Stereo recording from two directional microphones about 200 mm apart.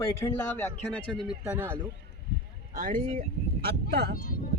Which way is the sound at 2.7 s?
45° right (ahead or behind).